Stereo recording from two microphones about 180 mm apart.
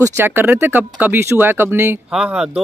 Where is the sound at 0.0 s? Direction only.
15° right (ahead or behind).